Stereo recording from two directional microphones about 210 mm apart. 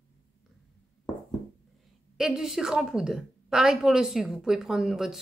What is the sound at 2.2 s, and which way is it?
A woman's voice, centre (ahead or behind).